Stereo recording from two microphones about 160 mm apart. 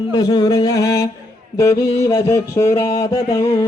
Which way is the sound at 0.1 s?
25° left (ahead or behind).